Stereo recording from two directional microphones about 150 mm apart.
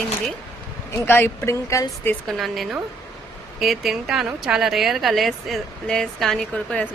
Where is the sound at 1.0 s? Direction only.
15° left (ahead or behind).